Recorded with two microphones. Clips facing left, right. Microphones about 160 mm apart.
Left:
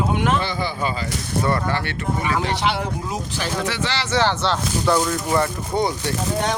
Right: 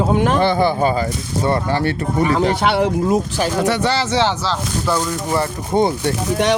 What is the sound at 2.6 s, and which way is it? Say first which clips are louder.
Speech: right 7 dB; 65° right (ahead or behind).